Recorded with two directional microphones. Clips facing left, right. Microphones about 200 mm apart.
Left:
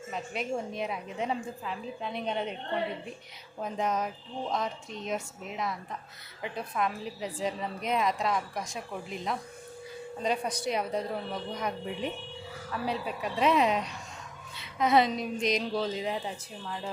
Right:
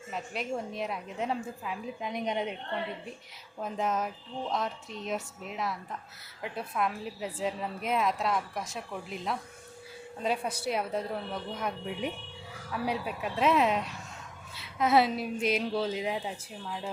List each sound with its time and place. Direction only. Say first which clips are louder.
0.1 s a woman's voice: left 1 dB; centre (ahead or behind)
3.6 s a woman's voice: left 1 dB; centre (ahead or behind)